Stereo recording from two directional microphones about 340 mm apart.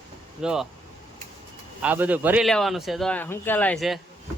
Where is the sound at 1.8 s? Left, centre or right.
Centre.